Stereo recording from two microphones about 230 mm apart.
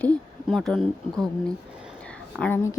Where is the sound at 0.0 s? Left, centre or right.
Centre.